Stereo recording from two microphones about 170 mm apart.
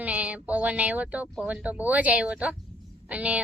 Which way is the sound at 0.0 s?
10° right (ahead or behind).